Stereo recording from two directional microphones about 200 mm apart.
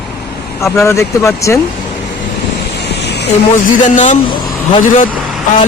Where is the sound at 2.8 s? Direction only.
55° left (ahead or behind).